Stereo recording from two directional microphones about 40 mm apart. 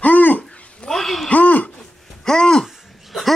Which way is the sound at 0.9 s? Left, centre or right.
Centre.